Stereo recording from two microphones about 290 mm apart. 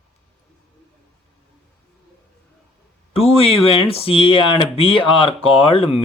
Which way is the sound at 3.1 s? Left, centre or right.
Centre.